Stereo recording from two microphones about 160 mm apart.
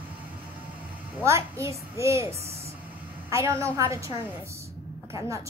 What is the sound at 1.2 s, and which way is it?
A woman's voice, 15° right (ahead or behind).